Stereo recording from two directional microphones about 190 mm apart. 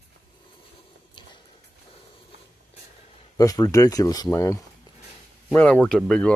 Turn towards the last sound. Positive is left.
turn(degrees=5)  # may be behind; listen again after turning